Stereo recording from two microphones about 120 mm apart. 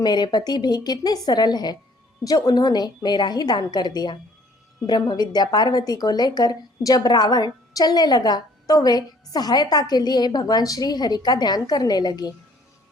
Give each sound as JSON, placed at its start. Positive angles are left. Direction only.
{"t": 0.0, "sound": "a woman's voice", "side_deg": 35}